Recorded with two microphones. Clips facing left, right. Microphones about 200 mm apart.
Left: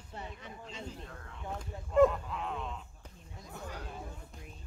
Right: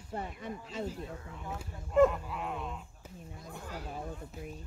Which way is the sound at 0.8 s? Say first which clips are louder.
Right 6 dB; 5° right (ahead or behind).